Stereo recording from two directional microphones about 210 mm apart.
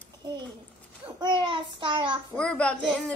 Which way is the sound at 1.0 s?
25° right (ahead or behind).